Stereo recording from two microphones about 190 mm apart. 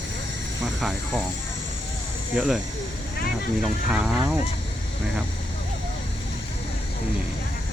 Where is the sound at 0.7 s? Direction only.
Centre (ahead or behind).